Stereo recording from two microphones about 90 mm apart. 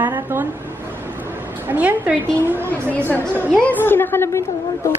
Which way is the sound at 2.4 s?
20° right (ahead or behind).